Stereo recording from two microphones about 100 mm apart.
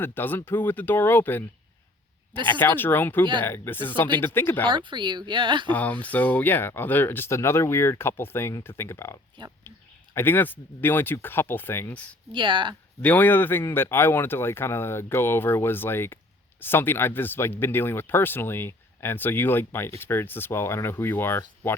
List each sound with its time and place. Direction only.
0.0 s speech: 20° left (ahead or behind)
2.5 s speech: 20° left (ahead or behind)
4.7 s speech: 55° right (ahead or behind)
5.6 s speech: 15° left (ahead or behind)
9.7 s a sound: 25° left (ahead or behind)
10.2 s speech: 20° left (ahead or behind)
12.3 s speech: 55° right (ahead or behind)
13.0 s speech: 15° left (ahead or behind)